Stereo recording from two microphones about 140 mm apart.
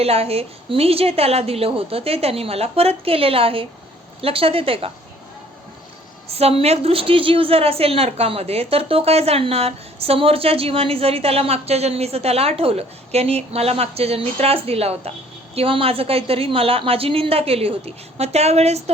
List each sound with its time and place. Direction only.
0.0 s a woman's voice: 45° right (ahead or behind)
6.3 s a woman's voice: 45° right (ahead or behind)